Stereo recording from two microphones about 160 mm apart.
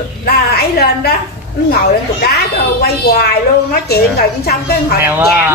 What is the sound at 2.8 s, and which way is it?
A woman's voice, 85° left.